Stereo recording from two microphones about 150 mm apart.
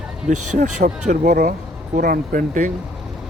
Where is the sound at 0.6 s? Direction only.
55° right (ahead or behind).